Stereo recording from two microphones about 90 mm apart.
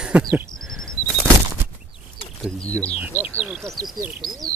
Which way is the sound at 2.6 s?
15° left (ahead or behind).